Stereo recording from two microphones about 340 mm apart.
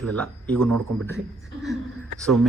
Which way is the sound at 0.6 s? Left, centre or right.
Right.